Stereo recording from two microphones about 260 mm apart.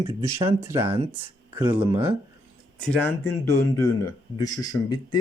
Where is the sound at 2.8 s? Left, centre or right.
Centre.